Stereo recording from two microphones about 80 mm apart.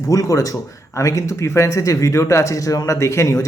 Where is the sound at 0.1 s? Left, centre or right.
Left.